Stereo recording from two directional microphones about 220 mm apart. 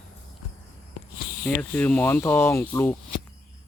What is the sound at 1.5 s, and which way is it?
Speech, 10° left (ahead or behind).